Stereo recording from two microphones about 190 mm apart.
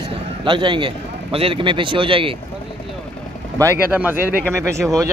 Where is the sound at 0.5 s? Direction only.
25° right (ahead or behind).